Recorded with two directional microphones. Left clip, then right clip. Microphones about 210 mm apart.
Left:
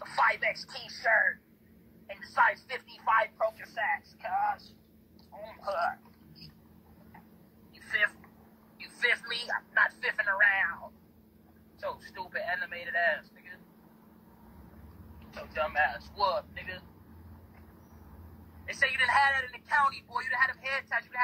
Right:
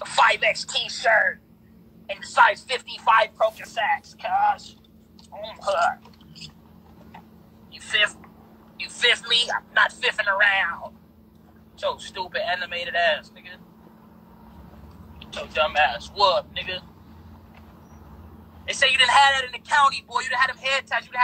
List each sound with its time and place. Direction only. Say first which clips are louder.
0.0 s a woman's voice: right 9 dB; 35° right (ahead or behind)
7.8 s a sound: right 7 dB; 35° right (ahead or behind)
8.8 s a woman's voice: right 8 dB; 35° right (ahead or behind)
15.1 s a woman's voice: right 10 dB; 40° right (ahead or behind)
18.7 s a woman's voice: right 9 dB; 40° right (ahead or behind)